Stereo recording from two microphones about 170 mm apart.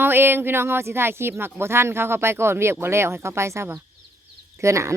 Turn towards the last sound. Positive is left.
turn(degrees=-15)  # may be behind; listen again after turning